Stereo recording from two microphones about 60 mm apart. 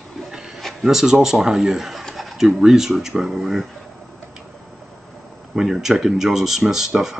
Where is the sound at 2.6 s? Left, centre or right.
Centre.